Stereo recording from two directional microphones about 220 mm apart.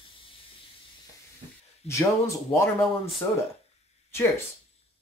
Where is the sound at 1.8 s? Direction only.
30° left (ahead or behind).